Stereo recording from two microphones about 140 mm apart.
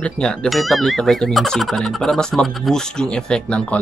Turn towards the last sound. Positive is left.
turn(degrees=5)  # may be behind; listen again after turning